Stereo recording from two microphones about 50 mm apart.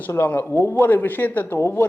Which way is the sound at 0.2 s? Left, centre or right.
Left.